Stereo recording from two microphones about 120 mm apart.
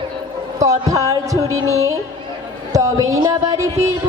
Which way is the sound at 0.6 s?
25° right (ahead or behind).